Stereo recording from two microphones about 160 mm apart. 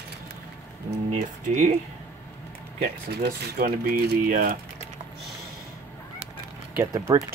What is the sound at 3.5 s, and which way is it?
Speech, 65° right (ahead or behind).